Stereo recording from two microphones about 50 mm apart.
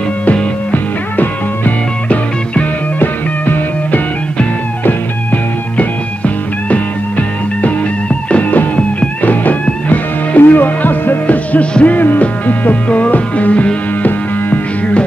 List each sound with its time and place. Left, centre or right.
0.2 s music: left
1.2 s music: left